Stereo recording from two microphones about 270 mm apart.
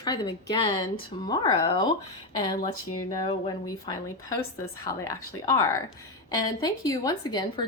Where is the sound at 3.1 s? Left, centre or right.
Centre.